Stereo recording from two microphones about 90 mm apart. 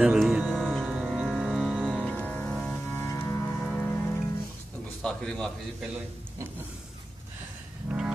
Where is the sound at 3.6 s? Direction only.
20° left (ahead or behind).